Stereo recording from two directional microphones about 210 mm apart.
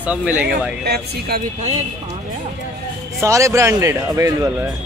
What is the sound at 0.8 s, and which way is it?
Speech, 50° right (ahead or behind).